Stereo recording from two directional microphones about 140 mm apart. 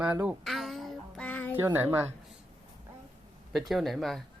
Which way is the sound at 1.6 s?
15° right (ahead or behind).